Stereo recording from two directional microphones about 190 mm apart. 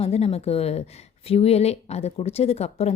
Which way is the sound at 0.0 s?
30° left (ahead or behind).